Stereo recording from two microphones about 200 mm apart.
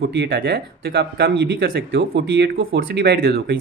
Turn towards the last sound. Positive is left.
turn(degrees=-55)  # may be behind; listen again after turning